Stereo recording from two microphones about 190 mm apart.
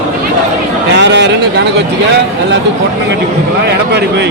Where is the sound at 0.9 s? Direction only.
65° right (ahead or behind).